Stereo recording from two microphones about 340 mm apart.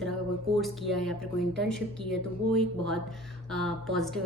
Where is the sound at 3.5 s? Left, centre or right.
Centre.